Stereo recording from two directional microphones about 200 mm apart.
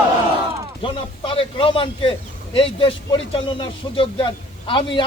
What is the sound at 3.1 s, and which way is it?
A man's voice, 25° left (ahead or behind).